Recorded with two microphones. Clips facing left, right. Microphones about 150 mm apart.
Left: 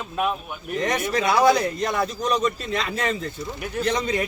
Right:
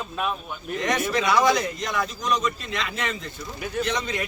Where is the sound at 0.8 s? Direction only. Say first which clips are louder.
Left 1 dB; 35° left (ahead or behind).